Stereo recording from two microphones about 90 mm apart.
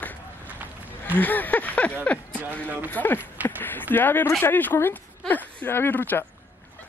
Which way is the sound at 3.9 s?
25° left (ahead or behind).